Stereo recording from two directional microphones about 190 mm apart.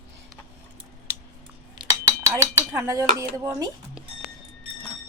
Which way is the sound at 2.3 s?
15° right (ahead or behind).